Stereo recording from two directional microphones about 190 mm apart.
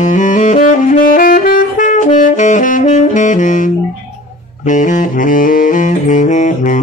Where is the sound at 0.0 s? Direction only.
40° left (ahead or behind).